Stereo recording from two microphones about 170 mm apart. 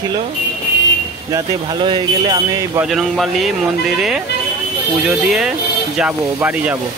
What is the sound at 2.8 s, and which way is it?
Speech, centre (ahead or behind).